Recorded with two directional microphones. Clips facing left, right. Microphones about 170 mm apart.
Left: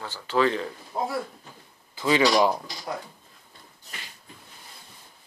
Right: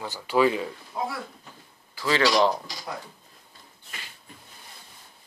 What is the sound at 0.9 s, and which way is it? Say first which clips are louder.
Speech: left 2 dB; 35° left (ahead or behind).